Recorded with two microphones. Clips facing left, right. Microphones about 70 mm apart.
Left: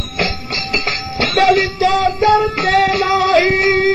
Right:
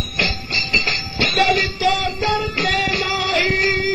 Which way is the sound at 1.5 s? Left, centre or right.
Left.